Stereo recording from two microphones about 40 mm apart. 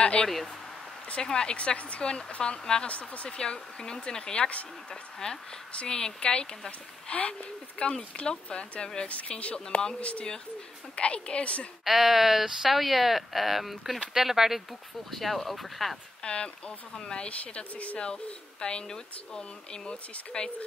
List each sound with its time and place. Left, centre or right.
0.0 s speech: left
1.8 s speech: left
2.9 s speech: left
3.3 s speech: centre
7.1 s speech: left
11.8 s speech: centre
15.0 s speech: centre
16.2 s speech: left